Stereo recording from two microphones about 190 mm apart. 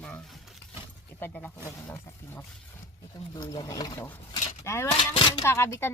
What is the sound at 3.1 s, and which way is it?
Speech, 20° left (ahead or behind).